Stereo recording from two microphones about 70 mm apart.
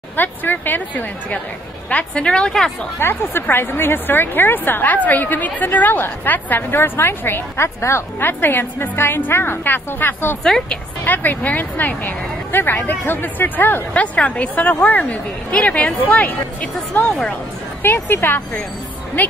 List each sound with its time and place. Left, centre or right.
0.1 s speech: left; by 2.7 s centre
3.0 s speech: left
8.2 s a woman's voice: left
10.4 s speech: centre
11.1 s speech: left
17.8 s a woman's voice: left